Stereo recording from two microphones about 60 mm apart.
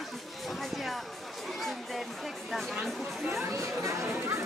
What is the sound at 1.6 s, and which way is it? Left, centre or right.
Chatter, centre.